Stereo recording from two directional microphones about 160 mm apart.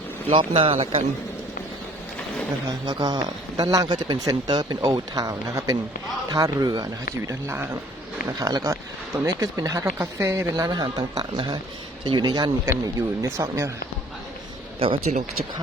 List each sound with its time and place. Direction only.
0.3 s speech: 35° right (ahead or behind)
2.8 s speech: 25° right (ahead or behind)
14.8 s speech: 35° right (ahead or behind)